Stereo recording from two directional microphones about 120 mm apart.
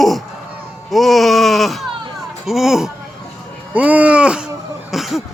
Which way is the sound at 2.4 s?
5° right (ahead or behind).